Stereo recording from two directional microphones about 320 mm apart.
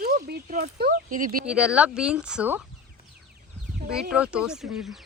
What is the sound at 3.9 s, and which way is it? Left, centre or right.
Speech, centre.